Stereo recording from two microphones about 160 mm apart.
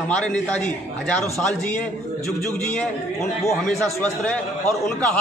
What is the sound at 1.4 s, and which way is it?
A man's voice, 5° left (ahead or behind).